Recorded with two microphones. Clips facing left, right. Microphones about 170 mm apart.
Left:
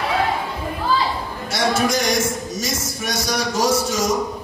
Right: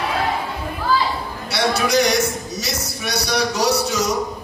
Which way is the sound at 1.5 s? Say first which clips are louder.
Right 1 dB; 45° left (ahead or behind).